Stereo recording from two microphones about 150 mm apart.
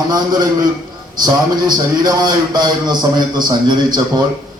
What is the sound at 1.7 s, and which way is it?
A man's voice, 30° right (ahead or behind).